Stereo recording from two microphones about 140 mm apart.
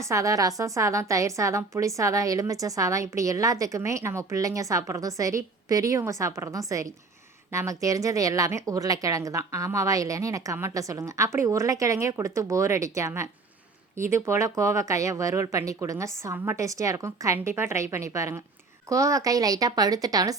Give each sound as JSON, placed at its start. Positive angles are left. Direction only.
{"t": 0.0, "sound": "a woman's voice", "side_deg": -20}